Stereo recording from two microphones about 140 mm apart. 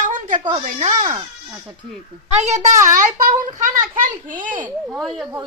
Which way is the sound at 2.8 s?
70° right (ahead or behind).